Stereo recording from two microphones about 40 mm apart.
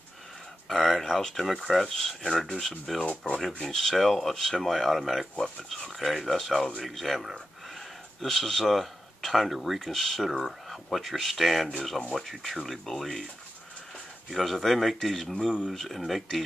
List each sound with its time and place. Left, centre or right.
0.7 s a sound: centre
1.0 s speech: centre
3.0 s speech: left
3.6 s speech: centre
14.3 s speech: centre